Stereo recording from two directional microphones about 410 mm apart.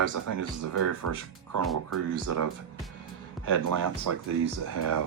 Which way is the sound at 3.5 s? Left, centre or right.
Right.